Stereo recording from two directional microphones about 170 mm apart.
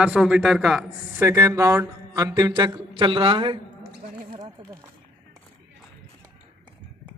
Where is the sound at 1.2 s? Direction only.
15° right (ahead or behind).